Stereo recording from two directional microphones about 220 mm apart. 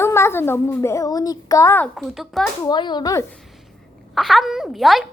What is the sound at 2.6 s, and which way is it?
Speech, 20° left (ahead or behind).